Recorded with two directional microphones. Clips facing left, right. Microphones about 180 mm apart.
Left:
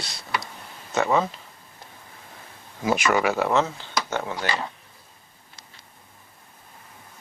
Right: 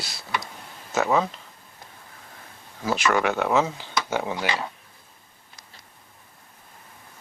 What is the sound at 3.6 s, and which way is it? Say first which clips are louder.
Speech: even; 10° right (ahead or behind).